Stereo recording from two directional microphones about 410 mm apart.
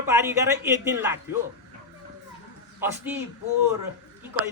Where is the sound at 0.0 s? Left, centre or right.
Centre.